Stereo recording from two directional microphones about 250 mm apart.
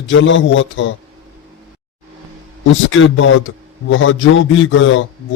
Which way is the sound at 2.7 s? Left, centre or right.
Left.